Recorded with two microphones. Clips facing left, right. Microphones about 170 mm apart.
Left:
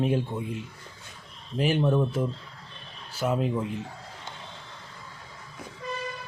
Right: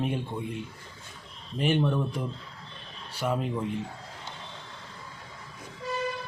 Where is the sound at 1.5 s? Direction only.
5° left (ahead or behind).